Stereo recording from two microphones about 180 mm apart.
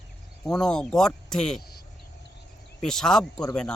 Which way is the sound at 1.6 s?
60° left (ahead or behind).